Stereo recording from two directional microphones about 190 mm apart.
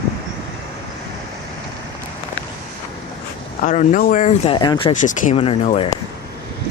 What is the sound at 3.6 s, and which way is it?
Speech, 40° left (ahead or behind).